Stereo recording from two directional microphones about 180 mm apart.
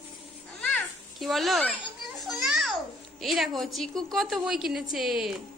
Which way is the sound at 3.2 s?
Centre (ahead or behind).